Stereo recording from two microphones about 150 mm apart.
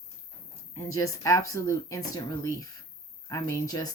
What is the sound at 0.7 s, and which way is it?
Speech, 20° left (ahead or behind).